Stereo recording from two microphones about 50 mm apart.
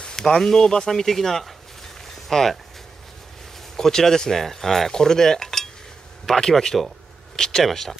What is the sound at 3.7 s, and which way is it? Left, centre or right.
Speech, centre.